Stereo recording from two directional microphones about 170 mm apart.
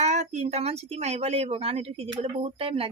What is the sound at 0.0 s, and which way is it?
Speech, 40° right (ahead or behind).